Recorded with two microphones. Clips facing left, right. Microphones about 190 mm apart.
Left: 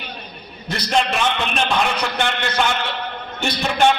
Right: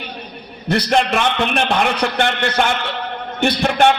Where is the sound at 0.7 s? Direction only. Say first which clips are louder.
Right 4 dB; 60° right (ahead or behind).